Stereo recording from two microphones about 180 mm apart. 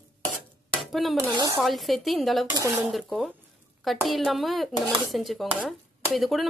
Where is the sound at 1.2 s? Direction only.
20° right (ahead or behind).